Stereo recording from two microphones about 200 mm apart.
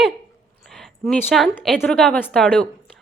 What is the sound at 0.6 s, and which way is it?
A woman's voice, centre (ahead or behind).